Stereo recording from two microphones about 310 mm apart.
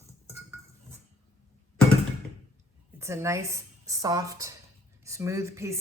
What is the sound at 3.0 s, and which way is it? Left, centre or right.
A woman's voice, centre.